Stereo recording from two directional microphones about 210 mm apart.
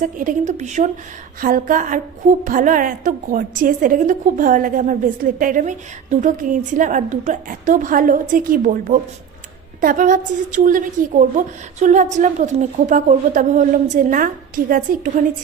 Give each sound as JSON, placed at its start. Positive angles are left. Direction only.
{"t": 0.0, "sound": "a woman's voice", "side_deg": -40}